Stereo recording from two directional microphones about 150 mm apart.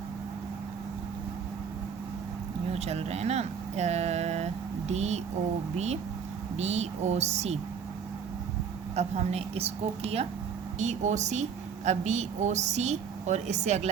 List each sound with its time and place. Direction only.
2.7 s a woman's voice: 45° right (ahead or behind)
9.0 s a woman's voice: 45° right (ahead or behind)